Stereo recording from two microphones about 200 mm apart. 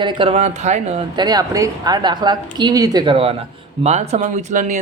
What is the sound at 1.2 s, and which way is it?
Speech, 20° right (ahead or behind).